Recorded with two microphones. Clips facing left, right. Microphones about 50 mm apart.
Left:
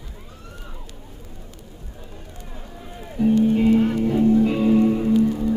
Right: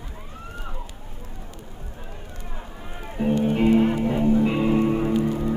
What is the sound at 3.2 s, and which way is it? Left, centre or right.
Music, right.